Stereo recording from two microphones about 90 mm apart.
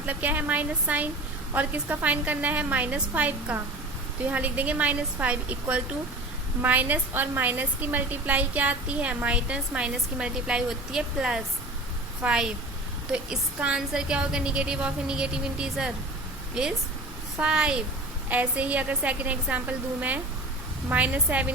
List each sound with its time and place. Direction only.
0.1 s a woman's voice: 20° right (ahead or behind)
17.3 s a woman's voice: 10° right (ahead or behind)